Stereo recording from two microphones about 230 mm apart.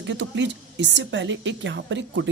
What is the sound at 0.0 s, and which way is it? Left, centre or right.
Speech, right.